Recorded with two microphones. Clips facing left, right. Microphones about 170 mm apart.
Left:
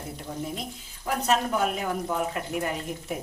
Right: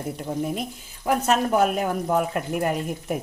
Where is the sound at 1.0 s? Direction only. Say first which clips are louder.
Right 4 dB; 50° right (ahead or behind).